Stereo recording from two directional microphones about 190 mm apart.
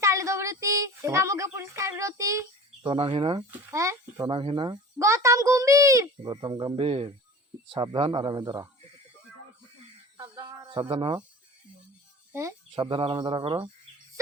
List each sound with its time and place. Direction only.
0.0 s child singing: 15° right (ahead or behind)
2.9 s a child's voice: 25° right (ahead or behind)
3.7 s speech: 15° right (ahead or behind)
4.3 s a child's voice: 25° right (ahead or behind)
10.2 s a sound: 20° right (ahead or behind)
12.3 s speech: 15° right (ahead or behind)
12.7 s a child's voice: 25° right (ahead or behind)